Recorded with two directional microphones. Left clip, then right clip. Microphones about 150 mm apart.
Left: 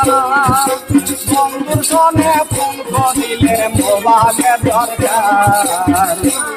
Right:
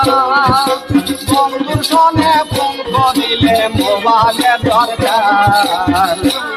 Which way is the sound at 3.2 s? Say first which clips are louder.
Right 2 dB; 25° left (ahead or behind).